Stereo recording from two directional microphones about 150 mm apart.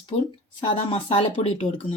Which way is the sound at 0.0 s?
35° left (ahead or behind).